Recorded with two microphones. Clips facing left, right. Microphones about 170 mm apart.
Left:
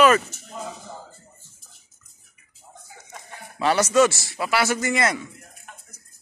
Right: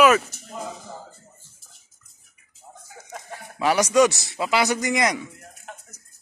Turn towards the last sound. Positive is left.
turn(degrees=-15)  # may be behind; listen again after turning